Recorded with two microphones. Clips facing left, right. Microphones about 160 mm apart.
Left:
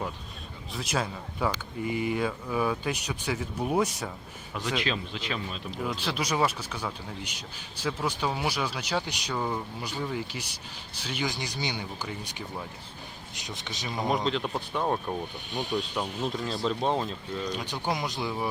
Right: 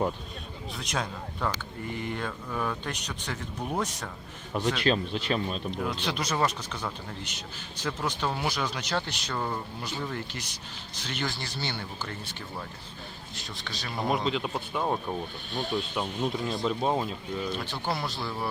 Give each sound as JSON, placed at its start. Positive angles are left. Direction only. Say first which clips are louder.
{"t": 0.7, "sound": "speech", "louder": "left 3 dB", "side_deg": 5}
{"t": 4.5, "sound": "speech", "louder": "right 4 dB", "side_deg": -45}
{"t": 5.7, "sound": "speech", "louder": "even", "side_deg": 0}
{"t": 13.9, "sound": "speech", "louder": "even", "side_deg": 0}
{"t": 15.5, "sound": "speech", "louder": "even", "side_deg": 15}
{"t": 15.8, "sound": "speech", "louder": "right 1 dB", "side_deg": -5}
{"t": 17.5, "sound": "speech", "louder": "left 1 dB", "side_deg": 15}